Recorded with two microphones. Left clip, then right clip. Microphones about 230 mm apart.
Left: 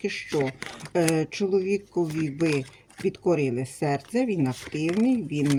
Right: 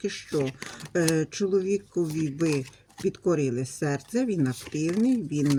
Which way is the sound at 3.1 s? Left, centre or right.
Centre.